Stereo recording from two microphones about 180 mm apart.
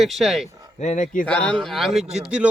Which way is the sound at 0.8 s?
45° left (ahead or behind).